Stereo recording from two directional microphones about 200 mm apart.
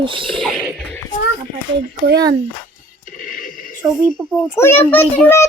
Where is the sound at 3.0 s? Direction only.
45° left (ahead or behind).